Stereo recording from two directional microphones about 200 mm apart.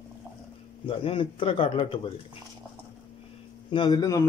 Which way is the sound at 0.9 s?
25° left (ahead or behind).